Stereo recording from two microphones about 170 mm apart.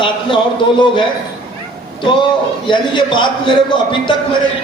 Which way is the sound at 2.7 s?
25° left (ahead or behind).